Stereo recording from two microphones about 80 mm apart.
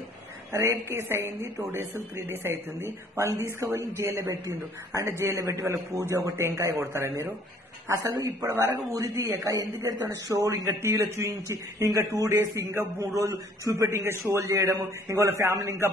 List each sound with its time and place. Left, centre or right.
0.5 s speech: right
8.0 s speech: right
8.5 s speech: right
9.4 s speech: right